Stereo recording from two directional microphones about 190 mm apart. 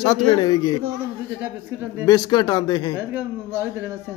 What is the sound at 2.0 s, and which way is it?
Speech, 20° left (ahead or behind).